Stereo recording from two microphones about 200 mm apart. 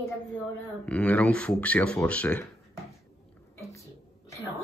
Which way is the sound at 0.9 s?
5° left (ahead or behind).